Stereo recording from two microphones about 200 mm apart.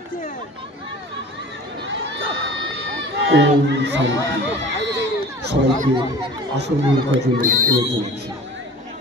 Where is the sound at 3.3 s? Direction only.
60° right (ahead or behind).